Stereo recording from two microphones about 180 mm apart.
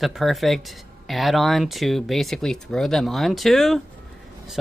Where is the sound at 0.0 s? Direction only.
Centre (ahead or behind).